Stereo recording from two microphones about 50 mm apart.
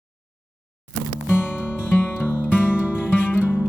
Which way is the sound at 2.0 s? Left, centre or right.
Left.